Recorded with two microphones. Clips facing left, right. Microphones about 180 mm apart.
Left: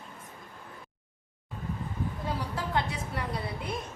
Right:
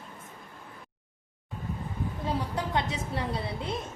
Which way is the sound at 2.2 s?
20° right (ahead or behind).